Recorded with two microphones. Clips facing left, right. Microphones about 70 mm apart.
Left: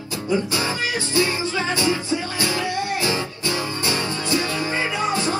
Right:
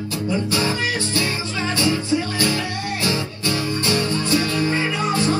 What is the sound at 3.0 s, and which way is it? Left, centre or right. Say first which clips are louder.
Music: right 1 dB; left.